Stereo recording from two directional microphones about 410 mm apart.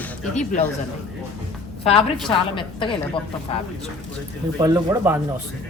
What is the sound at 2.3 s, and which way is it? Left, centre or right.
Speech, centre.